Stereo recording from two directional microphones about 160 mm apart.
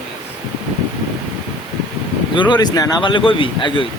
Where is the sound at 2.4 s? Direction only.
25° left (ahead or behind).